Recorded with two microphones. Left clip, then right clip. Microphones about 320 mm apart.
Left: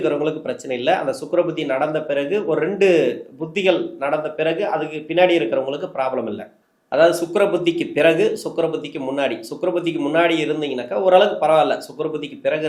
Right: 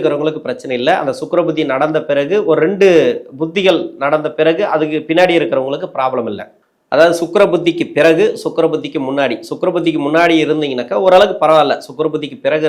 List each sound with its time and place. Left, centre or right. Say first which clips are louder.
0.0 s speech: right 5 dB; right